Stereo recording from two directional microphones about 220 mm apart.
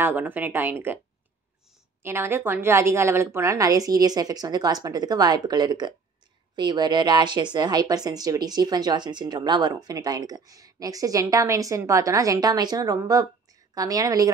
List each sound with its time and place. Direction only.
0.0 s a woman's voice: 10° right (ahead or behind)
2.0 s a woman's voice: 10° right (ahead or behind)